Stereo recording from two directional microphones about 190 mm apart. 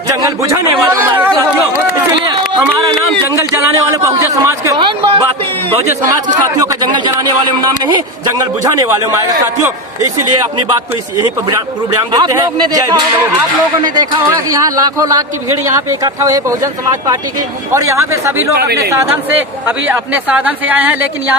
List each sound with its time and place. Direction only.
0.2 s speech: 15° right (ahead or behind)
4.0 s a sound: 15° right (ahead or behind)
6.6 s speech: 20° right (ahead or behind)
12.1 s speech: 20° right (ahead or behind)
17.7 s speech: 15° right (ahead or behind)